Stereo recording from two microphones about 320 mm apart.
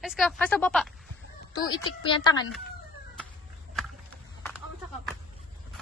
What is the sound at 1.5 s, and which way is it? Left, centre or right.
Speech, centre.